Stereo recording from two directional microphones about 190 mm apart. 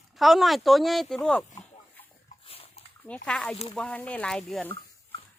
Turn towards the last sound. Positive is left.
turn(degrees=5)  # may be behind; listen again after turning